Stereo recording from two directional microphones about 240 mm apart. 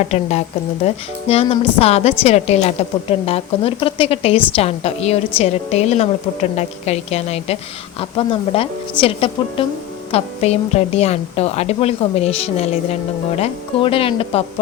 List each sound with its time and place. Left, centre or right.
0.1 s a woman's voice: left